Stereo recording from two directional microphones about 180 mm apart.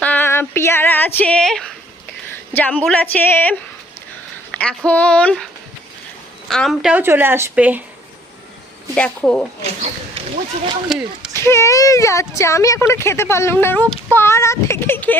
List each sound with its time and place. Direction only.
0.0 s female singing: 10° left (ahead or behind)
2.5 s a woman's voice: 10° left (ahead or behind)
4.5 s speech: 5° left (ahead or behind)
6.5 s a woman's voice: centre (ahead or behind)
9.0 s speech: 5° left (ahead or behind)
10.8 s speech: 5° right (ahead or behind)
11.3 s speech: 15° left (ahead or behind)